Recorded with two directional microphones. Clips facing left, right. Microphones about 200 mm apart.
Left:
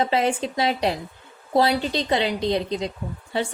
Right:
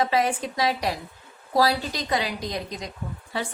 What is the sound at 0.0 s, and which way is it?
A woman's voice, 25° left (ahead or behind).